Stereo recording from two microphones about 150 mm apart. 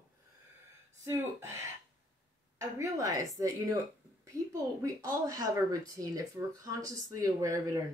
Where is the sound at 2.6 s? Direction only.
20° right (ahead or behind).